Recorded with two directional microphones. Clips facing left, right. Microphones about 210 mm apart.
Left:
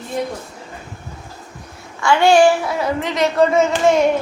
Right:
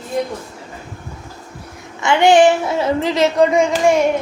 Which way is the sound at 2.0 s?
20° right (ahead or behind).